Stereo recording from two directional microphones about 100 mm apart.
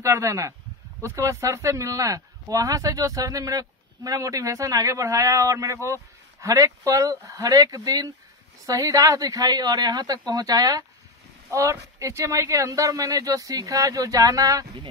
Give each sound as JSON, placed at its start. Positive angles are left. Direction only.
{"t": 0.0, "sound": "a man's voice", "side_deg": -30}